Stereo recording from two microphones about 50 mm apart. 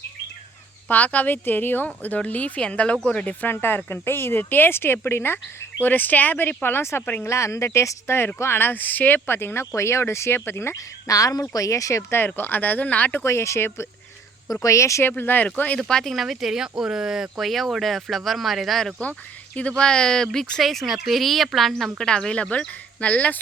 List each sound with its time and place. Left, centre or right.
0.9 s speech: left
3.4 s speech: left
5.8 s speech: left
7.3 s speech: left
9.7 s speech: left
11.6 s speech: left
12.1 s speech: left
13.2 s speech: left
14.7 s speech: left
15.2 s speech: left
15.8 s speech: centre
16.1 s speech: centre
19.5 s speech: left; by 22.0 s centre
22.0 s speech: centre